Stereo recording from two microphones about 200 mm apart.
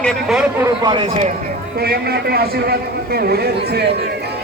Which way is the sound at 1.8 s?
50° right (ahead or behind).